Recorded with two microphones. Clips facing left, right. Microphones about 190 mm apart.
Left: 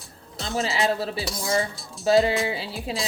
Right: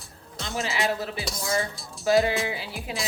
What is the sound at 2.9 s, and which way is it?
Speech, 30° left (ahead or behind).